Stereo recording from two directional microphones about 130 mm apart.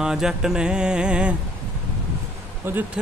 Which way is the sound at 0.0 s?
5° right (ahead or behind).